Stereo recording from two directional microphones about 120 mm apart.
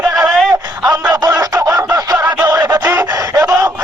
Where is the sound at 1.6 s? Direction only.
30° right (ahead or behind).